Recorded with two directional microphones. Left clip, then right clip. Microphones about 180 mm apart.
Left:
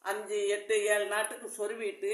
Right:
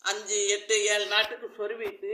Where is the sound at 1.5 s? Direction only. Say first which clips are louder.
Right 2 dB; 40° left (ahead or behind).